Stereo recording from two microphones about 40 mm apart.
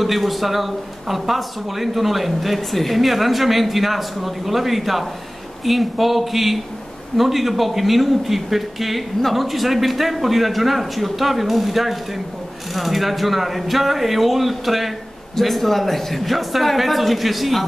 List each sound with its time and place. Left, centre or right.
0.0 s speech: centre